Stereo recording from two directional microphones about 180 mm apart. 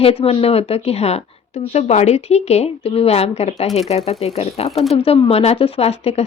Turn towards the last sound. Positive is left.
turn(degrees=35)  # may be behind; listen again after turning